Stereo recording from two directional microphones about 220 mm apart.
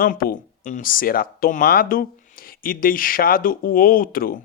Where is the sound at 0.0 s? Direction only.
40° left (ahead or behind).